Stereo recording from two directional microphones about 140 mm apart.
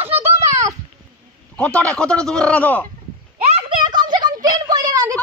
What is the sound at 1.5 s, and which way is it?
A woman's voice, 10° left (ahead or behind).